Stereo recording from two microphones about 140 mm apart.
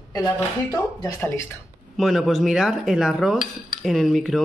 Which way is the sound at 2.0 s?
Centre (ahead or behind).